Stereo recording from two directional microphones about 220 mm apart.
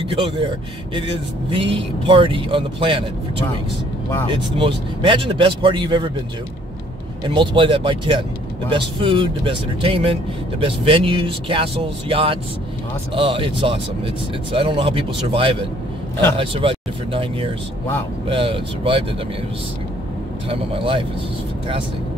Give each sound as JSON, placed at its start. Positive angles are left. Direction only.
{"t": 0.0, "sound": "speech", "side_deg": -25}
{"t": 1.5, "sound": "speech", "side_deg": -25}
{"t": 4.3, "sound": "speech", "side_deg": -25}
{"t": 7.2, "sound": "speech", "side_deg": -20}
{"t": 20.4, "sound": "speech", "side_deg": -25}